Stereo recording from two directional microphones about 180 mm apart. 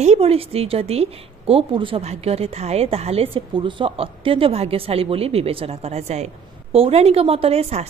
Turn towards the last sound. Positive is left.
turn(degrees=-35)  # may be behind; listen again after turning